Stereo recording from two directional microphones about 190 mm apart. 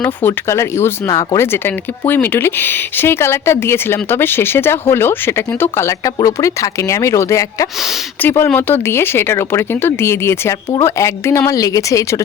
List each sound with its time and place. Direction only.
0.0 s speech: 10° left (ahead or behind)